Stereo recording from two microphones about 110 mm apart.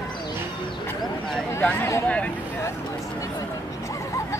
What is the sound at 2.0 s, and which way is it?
Speech, 10° left (ahead or behind).